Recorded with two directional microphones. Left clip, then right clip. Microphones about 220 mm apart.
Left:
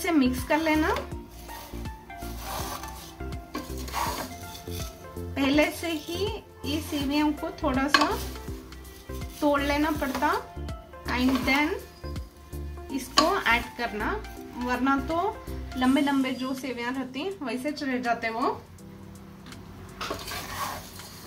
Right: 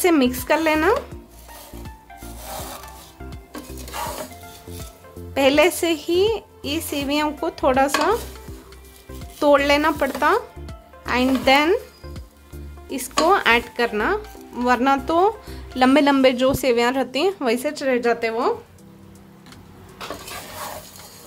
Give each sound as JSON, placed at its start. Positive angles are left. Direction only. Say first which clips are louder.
{"t": 0.0, "sound": "a woman's voice", "louder": "right 7 dB", "side_deg": -55}
{"t": 5.3, "sound": "a woman's voice", "louder": "right 8 dB", "side_deg": -55}
{"t": 9.5, "sound": "a woman's voice", "louder": "right 9 dB", "side_deg": -55}
{"t": 12.9, "sound": "a woman's voice", "louder": "right 6 dB", "side_deg": -55}